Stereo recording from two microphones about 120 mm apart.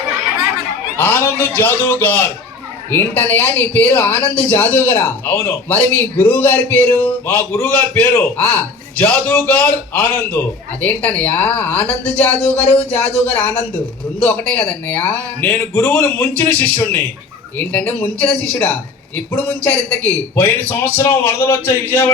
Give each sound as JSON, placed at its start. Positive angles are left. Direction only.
{"t": 0.9, "sound": "speech", "side_deg": 20}